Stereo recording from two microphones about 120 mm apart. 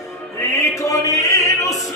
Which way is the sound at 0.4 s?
25° left (ahead or behind).